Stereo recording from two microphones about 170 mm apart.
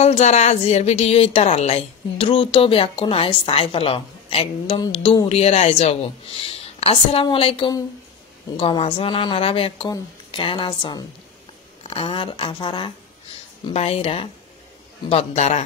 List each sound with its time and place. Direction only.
0.0 s a woman's voice: 40° left (ahead or behind)